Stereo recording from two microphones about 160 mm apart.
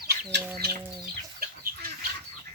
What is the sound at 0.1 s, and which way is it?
Chicken, 90° right.